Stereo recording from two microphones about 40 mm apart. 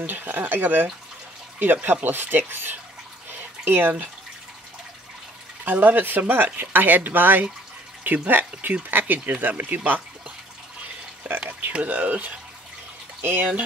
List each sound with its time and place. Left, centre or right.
0.0 s speech: right
5.7 s speech: right
11.3 s speech: right
11.8 s speech: right
13.2 s speech: right